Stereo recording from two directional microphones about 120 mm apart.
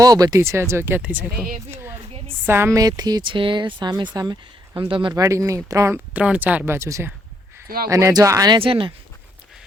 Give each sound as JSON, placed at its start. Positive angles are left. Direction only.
{"t": 0.0, "sound": "speech", "side_deg": -30}
{"t": 2.8, "sound": "speech", "side_deg": -30}
{"t": 4.9, "sound": "speech", "side_deg": -45}
{"t": 5.1, "sound": "speech", "side_deg": -25}
{"t": 5.9, "sound": "speech", "side_deg": -10}
{"t": 8.5, "sound": "speech", "side_deg": -45}